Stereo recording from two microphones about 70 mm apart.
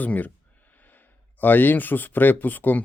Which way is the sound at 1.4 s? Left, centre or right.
Left.